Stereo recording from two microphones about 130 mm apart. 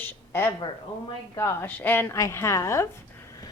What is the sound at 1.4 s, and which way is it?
A woman's voice, 15° left (ahead or behind).